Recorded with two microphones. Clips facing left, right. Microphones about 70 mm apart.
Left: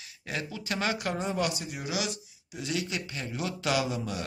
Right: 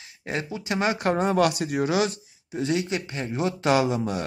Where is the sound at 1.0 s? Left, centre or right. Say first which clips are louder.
Right 9 dB; right.